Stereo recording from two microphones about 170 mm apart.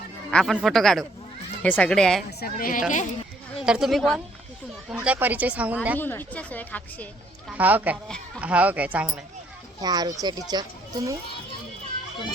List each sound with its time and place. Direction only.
0.3 s speech: 5° left (ahead or behind)
2.4 s speech: 55° left (ahead or behind)
2.9 s speech: 45° left (ahead or behind)
3.6 s speech: 5° right (ahead or behind)
6.0 s a woman's voice: 10° left (ahead or behind)
7.5 s speech: 10° right (ahead or behind)
9.8 s a child's voice: 25° right (ahead or behind)